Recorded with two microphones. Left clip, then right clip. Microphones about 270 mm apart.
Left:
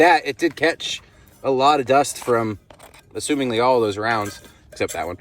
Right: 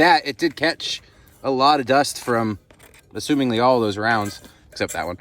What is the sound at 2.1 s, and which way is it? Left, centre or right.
Speech, right.